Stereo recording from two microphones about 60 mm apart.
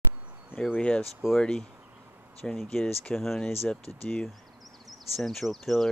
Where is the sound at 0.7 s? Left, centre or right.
Centre.